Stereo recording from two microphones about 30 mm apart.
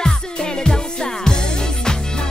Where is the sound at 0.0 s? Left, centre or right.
Left.